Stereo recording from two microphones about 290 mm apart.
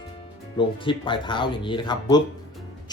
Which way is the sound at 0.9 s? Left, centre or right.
Centre.